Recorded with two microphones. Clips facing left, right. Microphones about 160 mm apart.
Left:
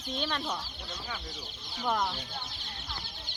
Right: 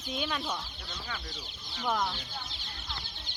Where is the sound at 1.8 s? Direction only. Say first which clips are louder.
Left 1 dB; 5° left (ahead or behind).